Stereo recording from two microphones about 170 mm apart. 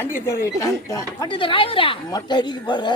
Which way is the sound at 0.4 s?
20° left (ahead or behind).